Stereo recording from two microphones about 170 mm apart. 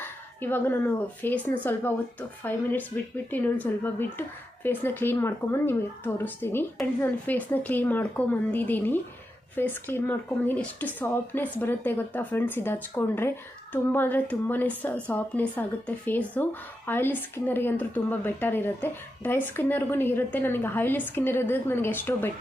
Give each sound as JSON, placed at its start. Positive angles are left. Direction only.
{"t": 0.0, "sound": "speech", "side_deg": 10}